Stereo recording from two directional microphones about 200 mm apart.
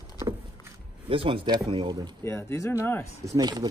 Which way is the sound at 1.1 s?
25° right (ahead or behind).